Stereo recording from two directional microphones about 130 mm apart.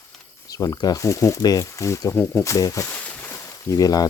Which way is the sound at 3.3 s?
25° left (ahead or behind).